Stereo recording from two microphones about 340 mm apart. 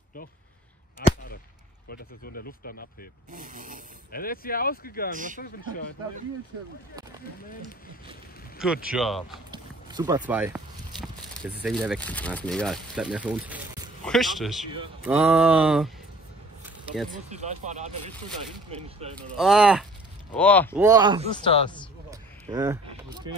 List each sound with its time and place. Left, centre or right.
1.0 s a sound: left
1.9 s speech: left
3.3 s speech: right
4.1 s speech: left
5.1 s speech: right
5.4 s speech: left
8.9 s speech: centre
9.5 s speech: centre
16.6 s a sound: centre
17.1 s speech: centre
19.3 s speech: centre
20.8 s speech: centre
21.4 s speech: centre
22.1 s a sound: centre